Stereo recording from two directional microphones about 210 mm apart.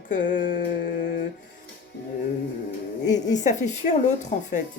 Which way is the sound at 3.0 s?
35° left (ahead or behind).